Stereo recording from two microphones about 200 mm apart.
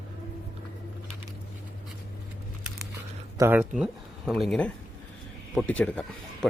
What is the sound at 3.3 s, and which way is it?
Speech, 10° right (ahead or behind).